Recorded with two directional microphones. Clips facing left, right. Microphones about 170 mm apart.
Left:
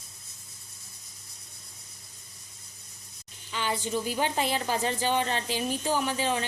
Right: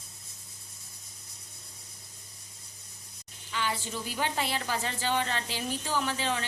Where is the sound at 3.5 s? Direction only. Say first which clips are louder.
Left 4 dB; 20° left (ahead or behind).